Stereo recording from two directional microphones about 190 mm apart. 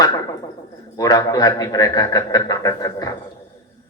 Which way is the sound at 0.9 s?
20° left (ahead or behind).